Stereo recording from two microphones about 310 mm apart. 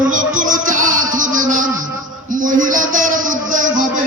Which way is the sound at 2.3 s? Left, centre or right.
Right.